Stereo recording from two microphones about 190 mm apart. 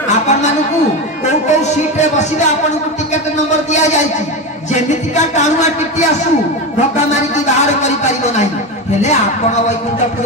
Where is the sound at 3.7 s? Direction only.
40° left (ahead or behind).